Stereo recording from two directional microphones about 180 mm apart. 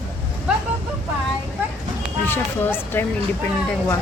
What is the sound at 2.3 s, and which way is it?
Speech, 10° left (ahead or behind).